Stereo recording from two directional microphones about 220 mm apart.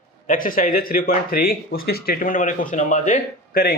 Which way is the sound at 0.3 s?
40° left (ahead or behind).